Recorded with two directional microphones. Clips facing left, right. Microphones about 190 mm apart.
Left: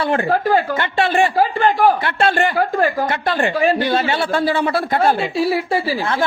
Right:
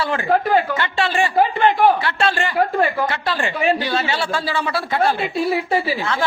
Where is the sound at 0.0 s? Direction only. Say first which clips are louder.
Left 4 dB; 55° left (ahead or behind).